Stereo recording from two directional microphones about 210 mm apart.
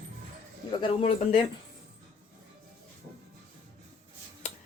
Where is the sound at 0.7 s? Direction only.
25° left (ahead or behind).